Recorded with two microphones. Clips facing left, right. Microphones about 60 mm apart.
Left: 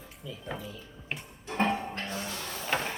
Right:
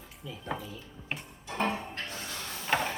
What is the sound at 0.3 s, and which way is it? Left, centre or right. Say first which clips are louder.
Speech: right 2 dB; centre.